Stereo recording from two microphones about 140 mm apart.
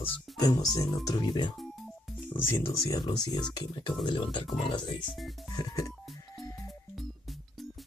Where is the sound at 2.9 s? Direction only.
30° left (ahead or behind).